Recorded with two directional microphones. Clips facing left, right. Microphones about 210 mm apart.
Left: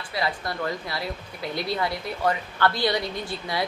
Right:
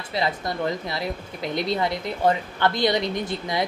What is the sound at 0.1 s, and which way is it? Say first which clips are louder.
A woman's voice: right 3 dB; 20° right (ahead or behind).